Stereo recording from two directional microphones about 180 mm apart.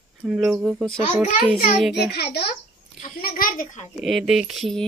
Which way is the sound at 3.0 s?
50° left (ahead or behind).